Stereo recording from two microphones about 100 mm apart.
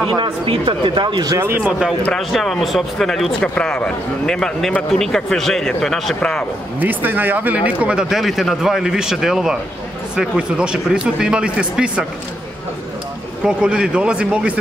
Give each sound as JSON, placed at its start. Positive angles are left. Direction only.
{"t": 0.1, "sound": "speech", "side_deg": -55}
{"t": 1.6, "sound": "speech", "side_deg": -10}
{"t": 6.8, "sound": "speech", "side_deg": -20}
{"t": 13.4, "sound": "speech", "side_deg": -10}